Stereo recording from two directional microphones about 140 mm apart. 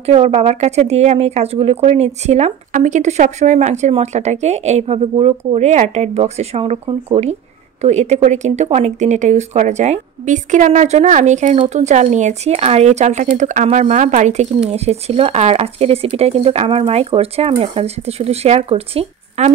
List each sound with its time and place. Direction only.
0.0 s a woman's voice: 45° right (ahead or behind)